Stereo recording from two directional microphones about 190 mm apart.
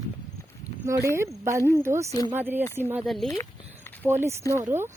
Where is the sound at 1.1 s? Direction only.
15° right (ahead or behind).